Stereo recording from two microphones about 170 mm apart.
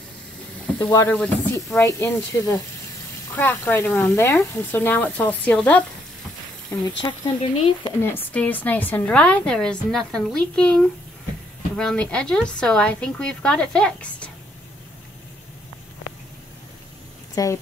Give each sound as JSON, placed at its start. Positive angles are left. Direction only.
{"t": 0.7, "sound": "a woman's voice", "side_deg": 15}
{"t": 7.0, "sound": "speech", "side_deg": 30}
{"t": 8.0, "sound": "a woman's voice", "side_deg": 10}
{"t": 17.4, "sound": "speech", "side_deg": 20}